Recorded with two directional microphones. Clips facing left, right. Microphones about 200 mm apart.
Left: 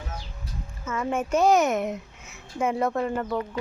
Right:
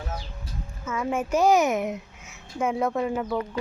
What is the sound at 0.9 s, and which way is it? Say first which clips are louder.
A child's voice: even; 5° right (ahead or behind).